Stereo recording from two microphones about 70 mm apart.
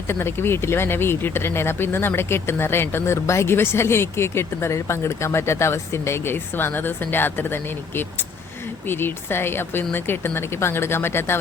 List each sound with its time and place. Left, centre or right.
0.1 s speech: left